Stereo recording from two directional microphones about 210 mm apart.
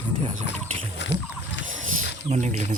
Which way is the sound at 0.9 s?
60° left (ahead or behind).